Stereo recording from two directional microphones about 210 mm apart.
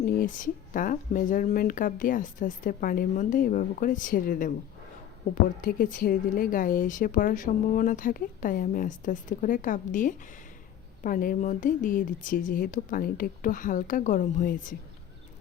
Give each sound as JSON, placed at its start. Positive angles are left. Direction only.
{"t": 0.0, "sound": "a woman's voice", "side_deg": 40}